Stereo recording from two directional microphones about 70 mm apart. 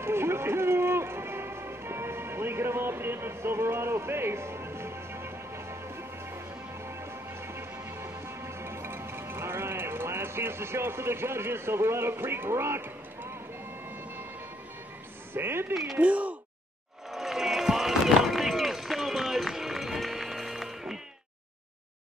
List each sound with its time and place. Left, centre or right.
0.0 s music: right
7.4 s music: right
15.3 s speech: right
15.7 s speech: centre
16.0 s speech: right
17.1 s run: centre